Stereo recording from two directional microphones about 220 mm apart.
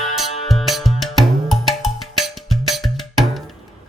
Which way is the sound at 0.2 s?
Centre (ahead or behind).